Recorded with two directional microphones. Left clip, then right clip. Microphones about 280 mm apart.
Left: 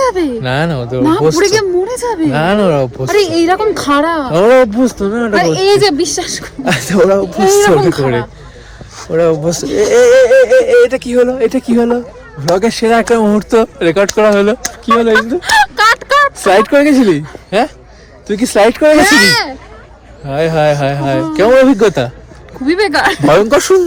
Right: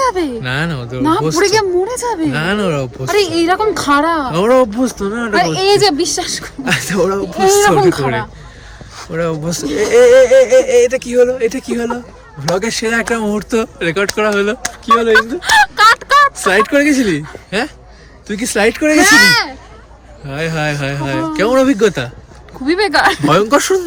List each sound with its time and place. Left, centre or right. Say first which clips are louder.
0.0 s a sound: left 2 dB; centre
0.4 s speech: left 4 dB; centre
1.4 s a woman's voice: left 2 dB; centre
2.3 s speech: left 5 dB; centre
3.1 s speech: left 2 dB; centre
4.3 s speech: left 7 dB; centre
5.3 s speech: left 2 dB; centre
6.7 s speech: left 5 dB; centre
7.6 s a woman's voice: left 1 dB; right
9.1 s speech: left 8 dB; centre
15.4 s speech: even; centre
16.4 s speech: left 3 dB; centre
22.6 s speech: left 1 dB; centre
23.2 s speech: left 3 dB; centre